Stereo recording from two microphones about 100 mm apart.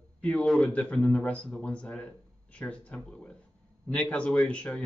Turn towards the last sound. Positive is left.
turn(degrees=10)  # may be behind; listen again after turning